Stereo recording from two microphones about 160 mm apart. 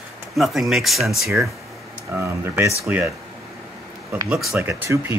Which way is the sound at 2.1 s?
15° right (ahead or behind).